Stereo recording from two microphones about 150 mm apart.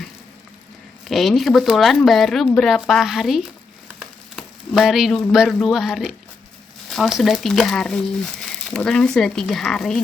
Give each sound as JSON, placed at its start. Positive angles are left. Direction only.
{"t": 1.0, "sound": "speech", "side_deg": 0}
{"t": 4.4, "sound": "a sound", "side_deg": 0}
{"t": 5.3, "sound": "speech", "side_deg": 0}